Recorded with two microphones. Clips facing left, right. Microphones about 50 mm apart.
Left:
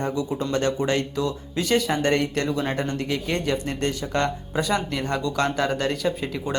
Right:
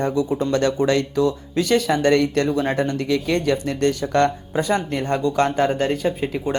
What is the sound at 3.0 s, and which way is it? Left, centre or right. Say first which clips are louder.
Speech: right 5 dB; right.